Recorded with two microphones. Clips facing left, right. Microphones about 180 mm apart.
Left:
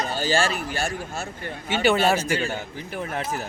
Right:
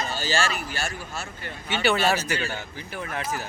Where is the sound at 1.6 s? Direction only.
50° left (ahead or behind).